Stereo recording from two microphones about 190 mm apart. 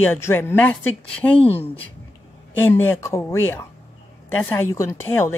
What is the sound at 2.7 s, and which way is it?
A woman's voice, 10° left (ahead or behind).